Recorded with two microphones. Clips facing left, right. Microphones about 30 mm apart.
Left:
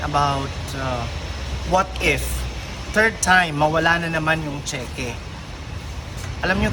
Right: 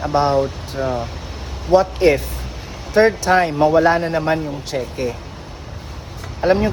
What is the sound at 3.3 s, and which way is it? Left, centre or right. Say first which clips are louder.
Speech: right 1 dB; left.